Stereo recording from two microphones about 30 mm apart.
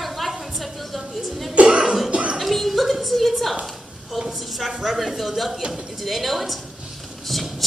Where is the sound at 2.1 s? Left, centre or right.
Right.